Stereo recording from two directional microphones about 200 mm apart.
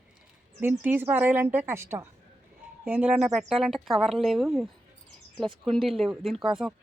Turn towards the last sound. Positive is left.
turn(degrees=0)  # may be behind; listen again after turning